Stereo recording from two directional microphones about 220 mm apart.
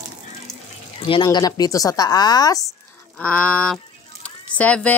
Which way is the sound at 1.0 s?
20° left (ahead or behind).